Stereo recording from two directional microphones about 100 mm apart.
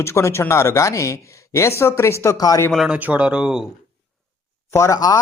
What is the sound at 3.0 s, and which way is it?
Speech, 15° right (ahead or behind).